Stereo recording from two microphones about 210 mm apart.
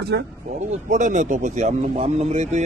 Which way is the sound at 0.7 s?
35° right (ahead or behind).